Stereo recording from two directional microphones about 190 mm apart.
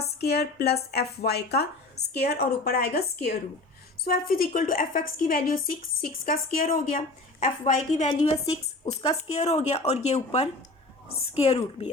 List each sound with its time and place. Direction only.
0.2 s a woman's voice: 55° left (ahead or behind); by 11.9 s 30° left (ahead or behind)